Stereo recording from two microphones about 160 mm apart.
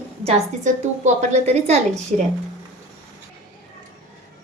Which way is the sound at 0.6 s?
50° right (ahead or behind).